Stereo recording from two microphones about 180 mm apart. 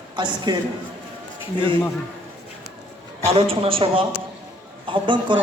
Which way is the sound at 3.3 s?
30° right (ahead or behind).